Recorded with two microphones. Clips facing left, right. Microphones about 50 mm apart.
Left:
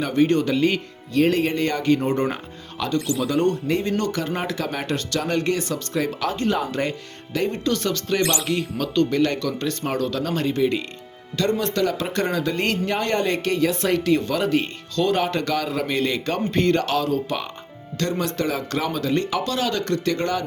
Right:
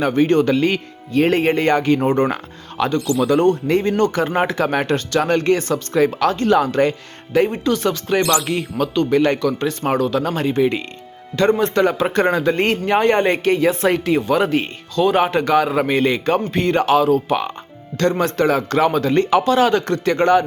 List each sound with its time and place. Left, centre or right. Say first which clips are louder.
0.0 s speech: right 4 dB; right
1.1 s speech: right 4 dB; right
6.1 s speech: right 7 dB; right
6.7 s speech: right 8 dB; right
7.3 s speech: right 6 dB; centre
10.6 s speech: right 4 dB; right; by 14.4 s centre
14.4 s speech: right 2 dB; right
14.9 s speech: right 5 dB; centre
16.5 s speech: right 1 dB; centre
16.7 s speech: right 7 dB; right
17.9 s speech: right 7 dB; right